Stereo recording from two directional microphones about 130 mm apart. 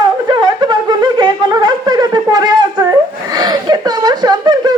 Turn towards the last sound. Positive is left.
turn(degrees=-30)  # may be behind; listen again after turning